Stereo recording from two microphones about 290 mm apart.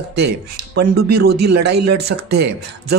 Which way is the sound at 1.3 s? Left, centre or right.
Right.